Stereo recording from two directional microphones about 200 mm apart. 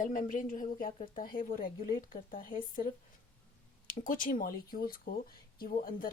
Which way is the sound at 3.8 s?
40° left (ahead or behind).